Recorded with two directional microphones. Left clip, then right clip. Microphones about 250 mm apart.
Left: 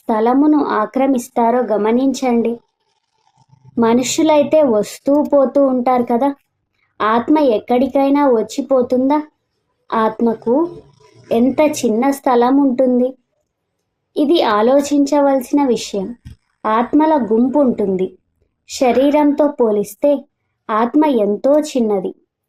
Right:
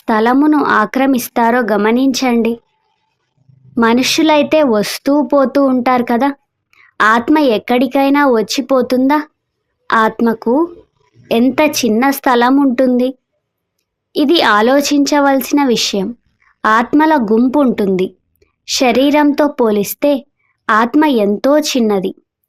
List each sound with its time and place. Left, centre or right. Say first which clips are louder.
0.2 s speech: right 2 dB; right
0.4 s speech: right 2 dB; right
0.7 s speech: right 3 dB; right
3.8 s speech: right 2 dB; right
11.3 s a woman's voice: right 2 dB; right